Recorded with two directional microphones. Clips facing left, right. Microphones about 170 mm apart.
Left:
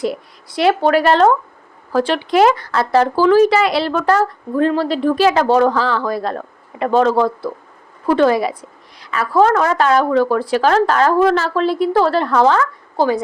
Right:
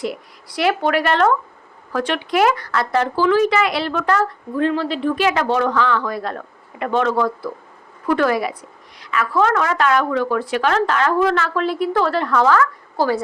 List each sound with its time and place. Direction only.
0.4 s a woman's voice: 25° left (ahead or behind)